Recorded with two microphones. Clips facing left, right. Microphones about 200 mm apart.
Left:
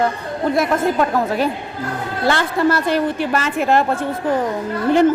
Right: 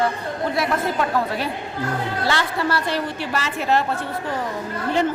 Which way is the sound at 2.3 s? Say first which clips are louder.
Left 7 dB; 50° left (ahead or behind).